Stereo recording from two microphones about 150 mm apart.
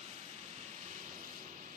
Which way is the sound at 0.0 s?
45° right (ahead or behind).